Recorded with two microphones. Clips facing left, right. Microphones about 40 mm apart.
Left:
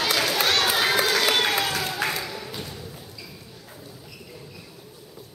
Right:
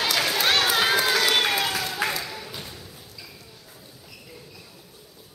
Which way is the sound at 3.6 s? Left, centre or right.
Centre.